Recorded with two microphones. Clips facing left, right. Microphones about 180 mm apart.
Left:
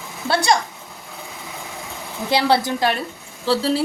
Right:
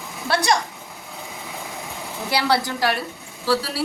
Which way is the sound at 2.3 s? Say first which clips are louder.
Left 4 dB; 20° left (ahead or behind).